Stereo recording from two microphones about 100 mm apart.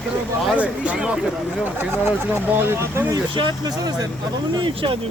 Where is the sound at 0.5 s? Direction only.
15° right (ahead or behind).